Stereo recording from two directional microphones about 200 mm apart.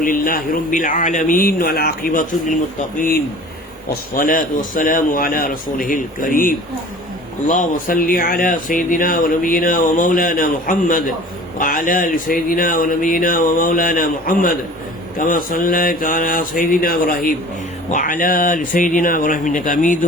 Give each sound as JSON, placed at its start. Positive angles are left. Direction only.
{"t": 0.0, "sound": "speech", "side_deg": 45}